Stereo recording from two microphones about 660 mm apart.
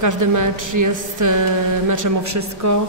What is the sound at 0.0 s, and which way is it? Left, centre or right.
A man's voice, right.